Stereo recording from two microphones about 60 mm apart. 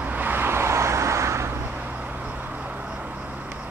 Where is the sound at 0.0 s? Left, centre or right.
Right.